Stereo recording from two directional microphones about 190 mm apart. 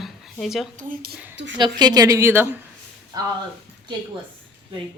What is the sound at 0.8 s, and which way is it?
Speech, 50° right (ahead or behind).